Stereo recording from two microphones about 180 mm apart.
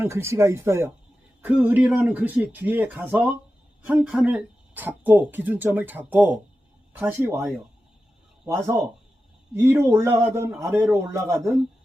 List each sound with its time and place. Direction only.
0.0 s a man's voice: 15° right (ahead or behind)